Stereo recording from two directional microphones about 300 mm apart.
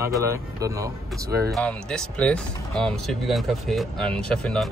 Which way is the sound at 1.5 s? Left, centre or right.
Centre.